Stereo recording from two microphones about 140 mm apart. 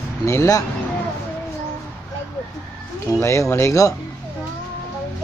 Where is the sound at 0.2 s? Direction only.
20° left (ahead or behind).